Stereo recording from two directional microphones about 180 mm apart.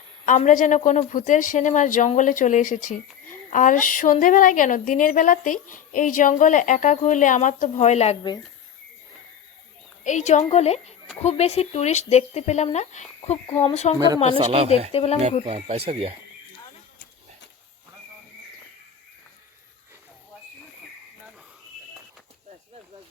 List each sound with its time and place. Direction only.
0.3 s a woman's voice: 45° left (ahead or behind)
10.0 s speech: 40° left (ahead or behind)
14.3 s speech: 30° right (ahead or behind)
14.9 s speech: 35° left (ahead or behind)
15.4 s speech: 35° right (ahead or behind)